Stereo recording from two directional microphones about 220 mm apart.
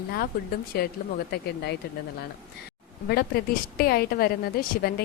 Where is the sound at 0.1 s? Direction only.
45° left (ahead or behind).